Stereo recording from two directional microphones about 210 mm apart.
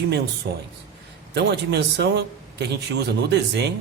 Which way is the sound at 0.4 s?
45° right (ahead or behind).